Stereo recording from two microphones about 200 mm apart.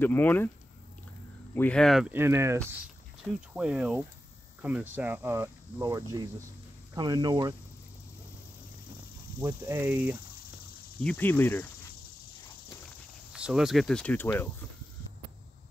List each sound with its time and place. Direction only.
0.0 s speech: 10° left (ahead or behind)
1.5 s speech: 5° left (ahead or behind); by 7.5 s 20° right (ahead or behind)
9.4 s speech: 15° right (ahead or behind)
11.0 s speech: 5° left (ahead or behind)
13.3 s speech: 5° right (ahead or behind)